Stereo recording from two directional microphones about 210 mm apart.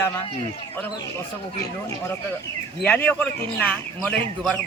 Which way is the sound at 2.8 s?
5° left (ahead or behind).